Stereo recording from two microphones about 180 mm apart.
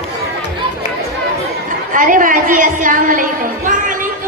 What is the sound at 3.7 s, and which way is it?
Music, 45° right (ahead or behind).